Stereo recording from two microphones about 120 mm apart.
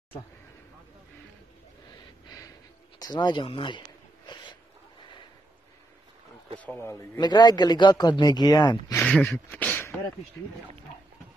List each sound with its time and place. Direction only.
2.2 s gasp: 30° left (ahead or behind)
3.0 s speech: 35° left (ahead or behind)
4.3 s a sound: 40° left (ahead or behind)
6.6 s speech: 20° left (ahead or behind)
7.2 s speech: 35° left (ahead or behind)
9.0 s speech: 10° left (ahead or behind)